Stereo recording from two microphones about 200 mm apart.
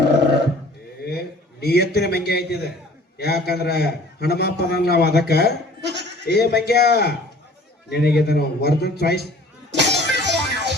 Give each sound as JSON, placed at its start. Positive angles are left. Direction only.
{"t": 1.6, "sound": "a man's voice", "side_deg": 55}
{"t": 5.8, "sound": "goat", "side_deg": -60}
{"t": 6.2, "sound": "a man's voice", "side_deg": 55}
{"t": 9.7, "sound": "music", "side_deg": -60}